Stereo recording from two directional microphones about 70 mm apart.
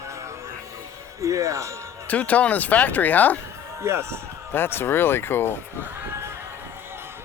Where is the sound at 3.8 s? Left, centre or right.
Right.